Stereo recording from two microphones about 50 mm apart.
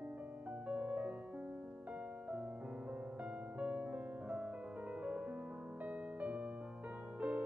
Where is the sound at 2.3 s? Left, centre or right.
Right.